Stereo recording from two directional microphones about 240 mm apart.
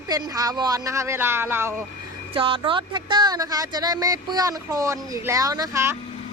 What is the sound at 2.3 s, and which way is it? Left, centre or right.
Speech, right.